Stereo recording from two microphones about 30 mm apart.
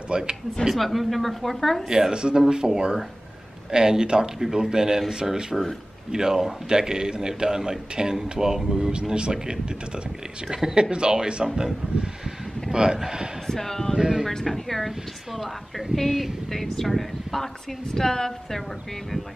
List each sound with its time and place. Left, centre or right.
0.1 s a man's voice: right
0.7 s speech: centre
1.9 s a man's voice: centre
2.1 s speech: right
2.6 s speech: centre
3.7 s a man's voice: right
13.5 s speech: centre
13.9 s speech: centre
14.4 s speech: centre
17.9 s speech: centre